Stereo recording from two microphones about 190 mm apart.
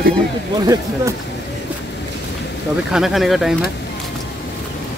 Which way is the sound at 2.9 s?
Centre (ahead or behind).